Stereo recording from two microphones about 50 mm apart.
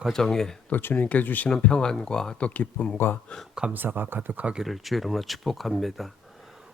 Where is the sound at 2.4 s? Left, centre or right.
Left.